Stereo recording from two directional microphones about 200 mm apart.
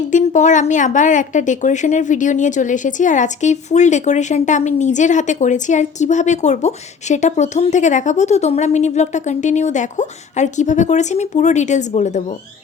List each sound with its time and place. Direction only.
0.1 s a woman's voice: 40° left (ahead or behind)